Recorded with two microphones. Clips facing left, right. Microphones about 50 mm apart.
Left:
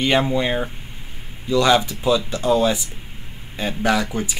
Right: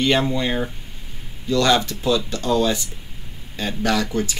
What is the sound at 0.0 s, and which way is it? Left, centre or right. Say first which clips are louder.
Speech: left 1 dB; centre.